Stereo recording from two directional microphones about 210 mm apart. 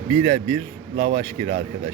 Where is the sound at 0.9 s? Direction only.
30° right (ahead or behind).